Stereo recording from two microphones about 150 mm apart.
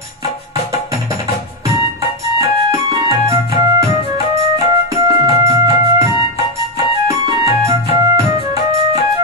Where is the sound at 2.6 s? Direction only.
20° right (ahead or behind).